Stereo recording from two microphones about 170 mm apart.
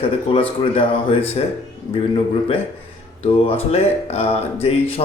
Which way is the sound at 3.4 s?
35° left (ahead or behind).